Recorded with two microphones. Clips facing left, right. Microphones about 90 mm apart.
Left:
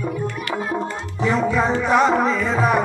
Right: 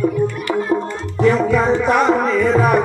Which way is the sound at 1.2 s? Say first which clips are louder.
Right 5 dB; centre (ahead or behind).